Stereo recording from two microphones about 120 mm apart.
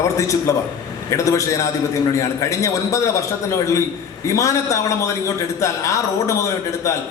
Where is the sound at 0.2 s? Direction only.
25° left (ahead or behind).